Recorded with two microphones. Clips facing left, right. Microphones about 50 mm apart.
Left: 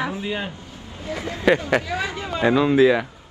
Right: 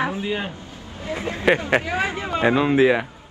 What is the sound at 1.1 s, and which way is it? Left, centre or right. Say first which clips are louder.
Speech: even; right.